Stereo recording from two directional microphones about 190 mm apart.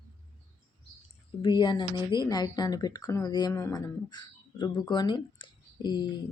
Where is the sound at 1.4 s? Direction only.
25° left (ahead or behind).